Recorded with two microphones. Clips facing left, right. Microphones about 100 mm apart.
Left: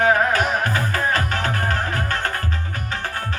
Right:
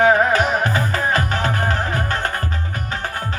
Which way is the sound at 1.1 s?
15° right (ahead or behind).